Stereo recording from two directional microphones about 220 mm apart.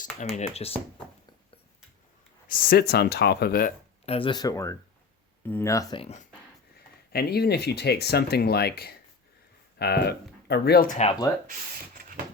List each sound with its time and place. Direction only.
0.3 s speech: 30° left (ahead or behind)
2.5 s speech: 40° left (ahead or behind)
4.0 s speech: 25° left (ahead or behind)
7.1 s speech: 45° left (ahead or behind)